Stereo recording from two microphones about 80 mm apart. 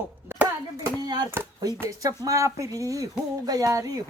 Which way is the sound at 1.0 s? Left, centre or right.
Right.